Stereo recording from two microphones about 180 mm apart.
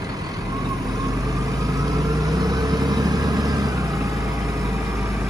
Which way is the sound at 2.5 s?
20° right (ahead or behind).